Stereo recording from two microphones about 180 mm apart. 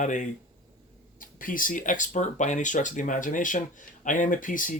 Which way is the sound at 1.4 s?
50° left (ahead or behind).